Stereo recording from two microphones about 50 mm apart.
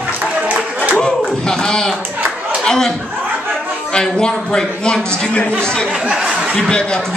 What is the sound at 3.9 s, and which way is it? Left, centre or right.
A man's voice, centre.